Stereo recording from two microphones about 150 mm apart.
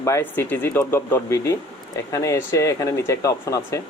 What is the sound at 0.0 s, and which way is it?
Speech, 20° left (ahead or behind).